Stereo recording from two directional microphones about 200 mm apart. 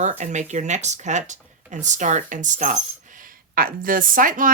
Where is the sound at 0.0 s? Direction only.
35° right (ahead or behind).